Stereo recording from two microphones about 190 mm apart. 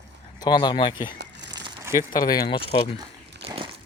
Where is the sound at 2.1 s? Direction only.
20° left (ahead or behind).